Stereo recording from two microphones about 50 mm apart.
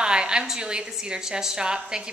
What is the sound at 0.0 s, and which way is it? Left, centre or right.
A woman's voice, centre.